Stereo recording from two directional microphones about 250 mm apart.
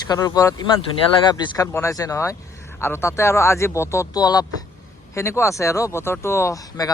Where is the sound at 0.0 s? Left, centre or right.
Centre.